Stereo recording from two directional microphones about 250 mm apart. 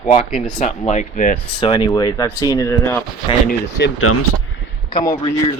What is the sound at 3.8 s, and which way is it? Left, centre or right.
Speech, left.